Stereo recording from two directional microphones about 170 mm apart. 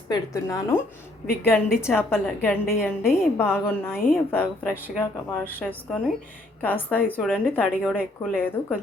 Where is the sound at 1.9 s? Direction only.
10° left (ahead or behind).